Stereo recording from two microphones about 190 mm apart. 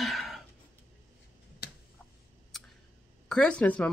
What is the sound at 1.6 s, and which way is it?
Tick, 55° left (ahead or behind).